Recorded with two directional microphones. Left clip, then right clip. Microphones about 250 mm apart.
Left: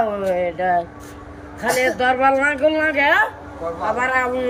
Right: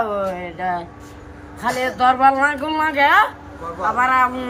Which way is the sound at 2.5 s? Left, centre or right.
Centre.